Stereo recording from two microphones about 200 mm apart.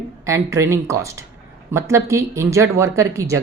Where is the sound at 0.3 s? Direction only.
15° right (ahead or behind).